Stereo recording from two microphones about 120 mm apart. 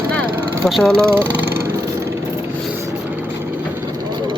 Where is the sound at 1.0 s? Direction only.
20° right (ahead or behind).